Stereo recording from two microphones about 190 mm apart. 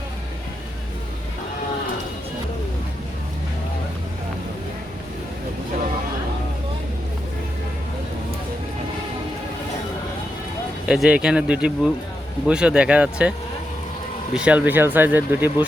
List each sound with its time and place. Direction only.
10.8 s speech: 5° right (ahead or behind)
14.3 s speech: 5° right (ahead or behind)